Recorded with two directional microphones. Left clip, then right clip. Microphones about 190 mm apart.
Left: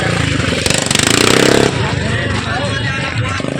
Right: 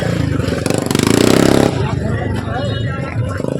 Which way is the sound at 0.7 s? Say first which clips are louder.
Left 1 dB; 65° right (ahead or behind).